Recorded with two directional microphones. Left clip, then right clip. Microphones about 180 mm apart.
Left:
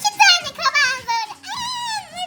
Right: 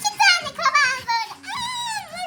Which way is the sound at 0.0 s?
25° left (ahead or behind).